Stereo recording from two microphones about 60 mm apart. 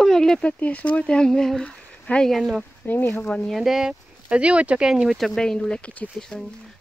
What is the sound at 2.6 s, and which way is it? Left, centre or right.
Speech, left.